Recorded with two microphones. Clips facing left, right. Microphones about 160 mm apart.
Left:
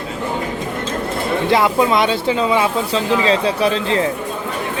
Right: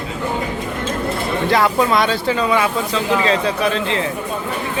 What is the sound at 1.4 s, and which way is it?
Speech, 20° left (ahead or behind).